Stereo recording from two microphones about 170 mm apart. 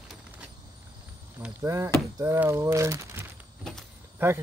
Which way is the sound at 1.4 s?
15° right (ahead or behind).